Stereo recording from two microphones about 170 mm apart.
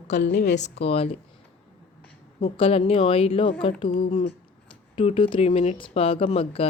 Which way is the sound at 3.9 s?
50° left (ahead or behind).